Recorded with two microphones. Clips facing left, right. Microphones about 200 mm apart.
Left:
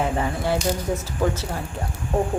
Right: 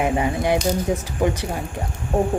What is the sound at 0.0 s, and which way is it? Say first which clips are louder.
A woman's voice: right 3 dB; 15° right (ahead or behind).